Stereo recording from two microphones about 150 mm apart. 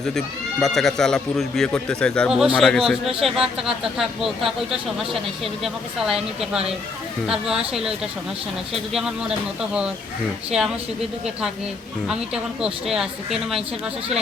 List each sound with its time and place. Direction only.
0.6 s speech: centre (ahead or behind)
12.0 s speech: 5° right (ahead or behind)